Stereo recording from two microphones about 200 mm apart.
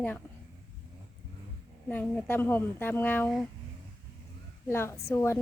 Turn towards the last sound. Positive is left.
turn(degrees=10)  # may be behind; listen again after turning